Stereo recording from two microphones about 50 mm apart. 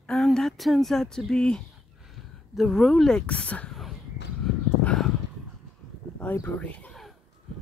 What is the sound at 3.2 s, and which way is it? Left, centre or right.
Speech, left.